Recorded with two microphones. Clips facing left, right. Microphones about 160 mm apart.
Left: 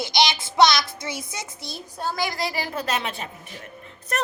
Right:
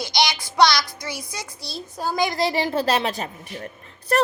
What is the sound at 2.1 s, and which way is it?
A woman's voice, 20° right (ahead or behind).